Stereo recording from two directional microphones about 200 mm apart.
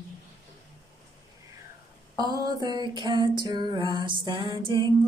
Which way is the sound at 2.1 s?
20° right (ahead or behind).